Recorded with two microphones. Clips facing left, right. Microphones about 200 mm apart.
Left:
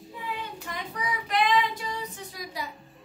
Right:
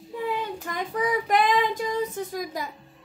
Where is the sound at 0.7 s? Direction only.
45° right (ahead or behind).